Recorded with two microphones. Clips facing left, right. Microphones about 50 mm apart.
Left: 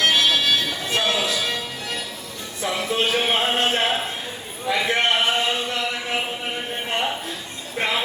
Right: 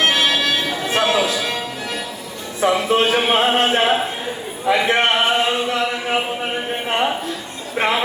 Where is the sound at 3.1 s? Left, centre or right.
Right.